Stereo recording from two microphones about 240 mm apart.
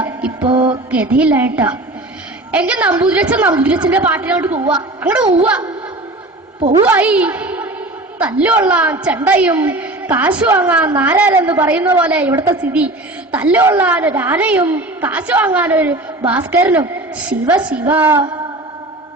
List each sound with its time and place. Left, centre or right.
0.0 s music: centre
0.4 s music: centre
0.9 s a woman's voice: centre
6.8 s a woman's voice: centre